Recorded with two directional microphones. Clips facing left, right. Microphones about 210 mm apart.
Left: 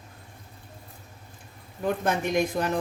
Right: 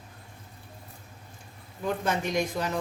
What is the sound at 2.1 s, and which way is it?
Speech, 55° left (ahead or behind).